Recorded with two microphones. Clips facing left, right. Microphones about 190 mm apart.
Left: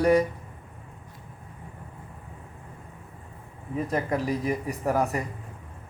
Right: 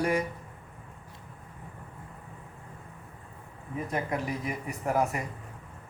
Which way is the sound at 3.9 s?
35° left (ahead or behind).